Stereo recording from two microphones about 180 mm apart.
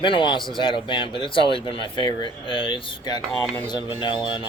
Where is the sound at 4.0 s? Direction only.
25° left (ahead or behind).